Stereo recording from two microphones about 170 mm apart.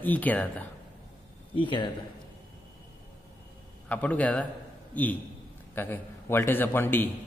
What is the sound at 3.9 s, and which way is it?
A man's voice, 10° left (ahead or behind).